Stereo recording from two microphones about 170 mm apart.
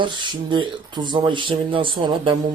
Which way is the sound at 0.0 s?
25° right (ahead or behind).